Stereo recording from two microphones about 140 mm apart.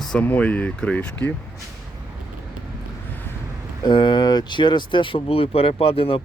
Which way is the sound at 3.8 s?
35° left (ahead or behind).